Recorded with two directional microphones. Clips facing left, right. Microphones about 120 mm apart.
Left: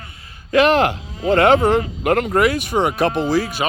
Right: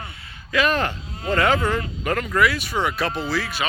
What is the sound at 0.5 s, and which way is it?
Speech, 80° left.